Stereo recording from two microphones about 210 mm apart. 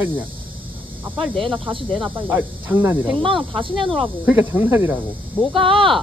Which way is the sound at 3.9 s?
10° right (ahead or behind).